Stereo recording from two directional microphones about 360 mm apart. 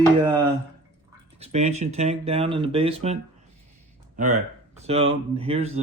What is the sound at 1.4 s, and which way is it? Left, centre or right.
Speech, centre.